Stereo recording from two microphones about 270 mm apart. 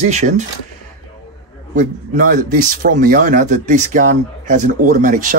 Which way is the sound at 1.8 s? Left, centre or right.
Right.